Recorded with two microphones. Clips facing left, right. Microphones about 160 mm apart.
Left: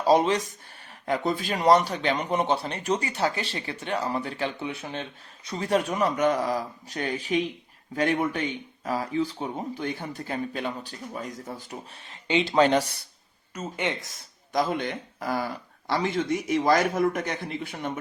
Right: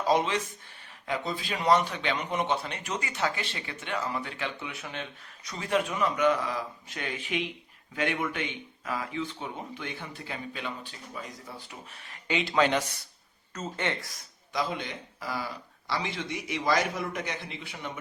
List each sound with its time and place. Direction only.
0.0 s a man's voice: 40° left (ahead or behind)
12.0 s a man's voice: 25° left (ahead or behind)
13.5 s speech: 15° left (ahead or behind)
14.5 s a man's voice: 45° left (ahead or behind)